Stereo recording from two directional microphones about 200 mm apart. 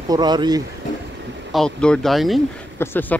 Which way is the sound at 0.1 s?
20° right (ahead or behind).